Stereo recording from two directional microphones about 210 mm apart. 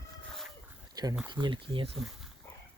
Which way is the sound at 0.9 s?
20° right (ahead or behind).